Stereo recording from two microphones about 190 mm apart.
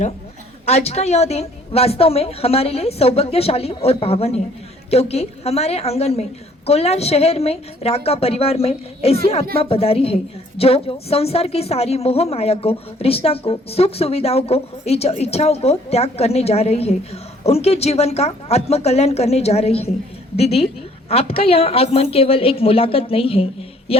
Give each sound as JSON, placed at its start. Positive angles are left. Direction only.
{"t": 0.6, "sound": "a woman's voice", "side_deg": 35}
{"t": 23.9, "sound": "music", "side_deg": 30}